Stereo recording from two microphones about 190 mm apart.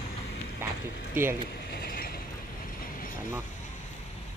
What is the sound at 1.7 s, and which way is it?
Vehicle, 50° left (ahead or behind).